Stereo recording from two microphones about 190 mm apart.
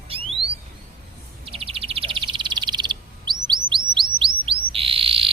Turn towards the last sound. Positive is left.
turn(degrees=-30)  # may be behind; listen again after turning